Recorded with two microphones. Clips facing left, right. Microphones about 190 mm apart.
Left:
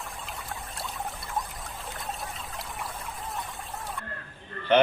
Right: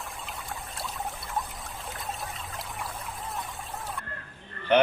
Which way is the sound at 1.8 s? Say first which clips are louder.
Even; centre (ahead or behind).